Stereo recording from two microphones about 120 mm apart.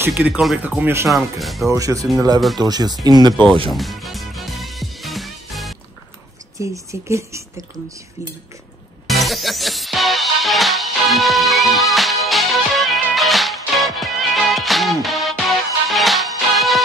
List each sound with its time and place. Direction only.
0.1 s speech: 5° right (ahead or behind)
1.0 s speech: centre (ahead or behind)
1.7 s speech: 25° right (ahead or behind)
3.7 s music: centre (ahead or behind)
6.6 s speech: 25° right (ahead or behind)
9.0 s music: centre (ahead or behind)